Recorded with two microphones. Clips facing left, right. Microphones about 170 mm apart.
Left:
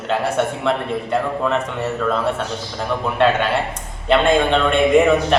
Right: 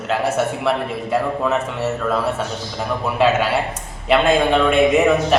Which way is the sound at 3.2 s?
5° right (ahead or behind).